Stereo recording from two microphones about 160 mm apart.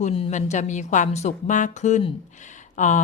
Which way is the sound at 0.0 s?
40° left (ahead or behind).